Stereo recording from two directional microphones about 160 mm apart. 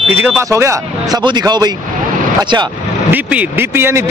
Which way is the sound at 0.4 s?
20° right (ahead or behind).